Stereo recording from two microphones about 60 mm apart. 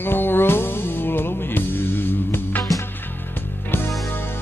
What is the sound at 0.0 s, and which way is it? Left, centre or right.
Music, left.